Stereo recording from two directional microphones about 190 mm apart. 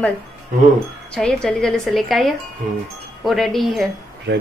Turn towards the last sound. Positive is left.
turn(degrees=-65)  # may be behind; listen again after turning